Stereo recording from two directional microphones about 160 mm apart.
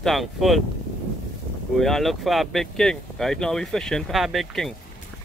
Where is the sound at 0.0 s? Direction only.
Centre (ahead or behind).